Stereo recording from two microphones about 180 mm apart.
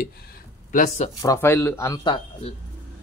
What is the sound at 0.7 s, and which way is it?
Speech, 40° left (ahead or behind).